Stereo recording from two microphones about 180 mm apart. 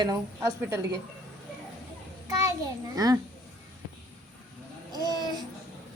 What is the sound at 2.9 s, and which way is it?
Speech, 20° right (ahead or behind).